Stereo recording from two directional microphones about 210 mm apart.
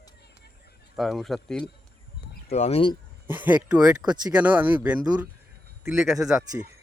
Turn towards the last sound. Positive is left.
turn(degrees=0)  # may be behind; listen again after turning